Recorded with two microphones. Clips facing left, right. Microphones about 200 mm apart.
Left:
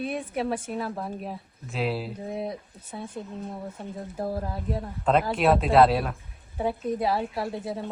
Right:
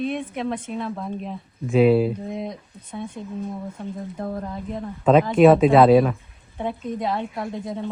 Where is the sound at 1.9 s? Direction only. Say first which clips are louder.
Right 13 dB; 55° right (ahead or behind).